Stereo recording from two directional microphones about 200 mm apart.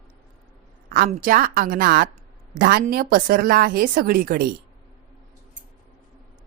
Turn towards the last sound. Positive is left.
turn(degrees=-45)  # may be behind; listen again after turning